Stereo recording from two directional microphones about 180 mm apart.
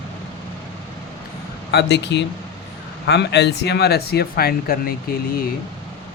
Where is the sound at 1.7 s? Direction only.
65° left (ahead or behind).